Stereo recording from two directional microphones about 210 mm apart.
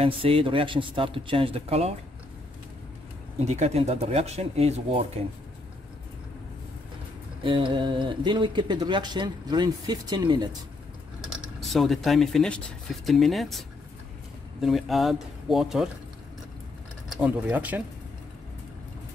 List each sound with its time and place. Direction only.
0.0 s speech: 25° right (ahead or behind)
3.3 s speech: 30° right (ahead or behind)
7.4 s speech: 25° right (ahead or behind)
11.6 s speech: centre (ahead or behind)
17.1 s speech: 5° right (ahead or behind)